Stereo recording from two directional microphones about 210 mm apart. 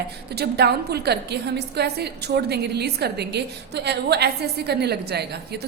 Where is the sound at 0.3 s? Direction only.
50° right (ahead or behind).